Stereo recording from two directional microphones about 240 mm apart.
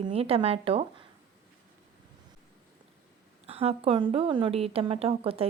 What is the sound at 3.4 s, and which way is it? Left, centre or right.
Speech, right.